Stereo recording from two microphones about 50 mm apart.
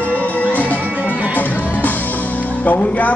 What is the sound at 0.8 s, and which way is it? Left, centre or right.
Music, right.